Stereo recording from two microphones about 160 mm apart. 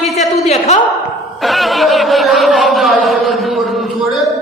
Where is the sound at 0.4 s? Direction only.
40° left (ahead or behind).